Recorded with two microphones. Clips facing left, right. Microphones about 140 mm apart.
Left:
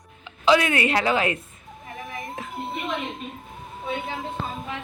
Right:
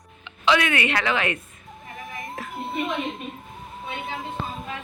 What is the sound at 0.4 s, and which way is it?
Speech, 35° left (ahead or behind).